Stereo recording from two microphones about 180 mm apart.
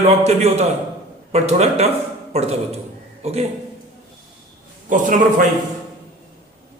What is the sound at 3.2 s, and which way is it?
Speech, 35° right (ahead or behind).